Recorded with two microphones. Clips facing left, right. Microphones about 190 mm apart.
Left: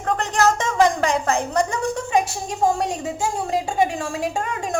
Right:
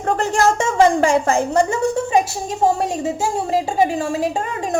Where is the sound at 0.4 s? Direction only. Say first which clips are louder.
Right 3 dB; 25° right (ahead or behind).